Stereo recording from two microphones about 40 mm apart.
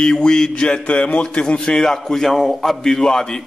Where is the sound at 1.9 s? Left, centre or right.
Centre.